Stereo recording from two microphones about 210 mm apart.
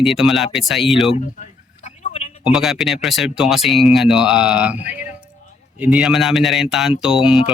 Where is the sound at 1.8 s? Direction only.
30° left (ahead or behind).